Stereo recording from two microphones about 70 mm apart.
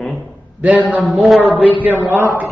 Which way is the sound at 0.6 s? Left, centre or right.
Right.